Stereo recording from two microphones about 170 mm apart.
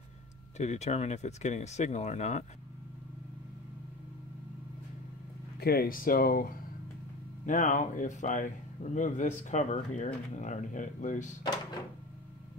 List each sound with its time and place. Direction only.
0.6 s speech: 40° left (ahead or behind)
5.6 s speech: 65° left (ahead or behind)
7.4 s speech: 50° left (ahead or behind)